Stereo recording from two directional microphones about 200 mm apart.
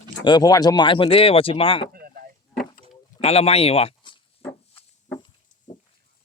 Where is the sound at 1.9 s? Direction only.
45° right (ahead or behind).